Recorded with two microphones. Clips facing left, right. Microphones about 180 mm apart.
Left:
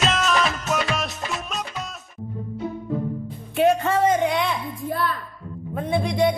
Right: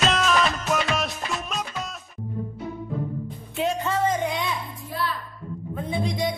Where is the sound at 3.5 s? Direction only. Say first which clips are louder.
Left 6 dB; 65° left (ahead or behind).